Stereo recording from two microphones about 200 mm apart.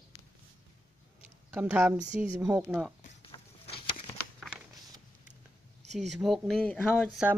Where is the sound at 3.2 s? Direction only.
25° left (ahead or behind).